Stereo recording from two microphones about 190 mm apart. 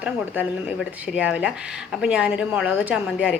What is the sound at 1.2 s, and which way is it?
A woman's voice, 5° right (ahead or behind).